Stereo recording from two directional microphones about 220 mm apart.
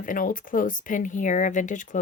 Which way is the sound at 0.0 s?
40° left (ahead or behind).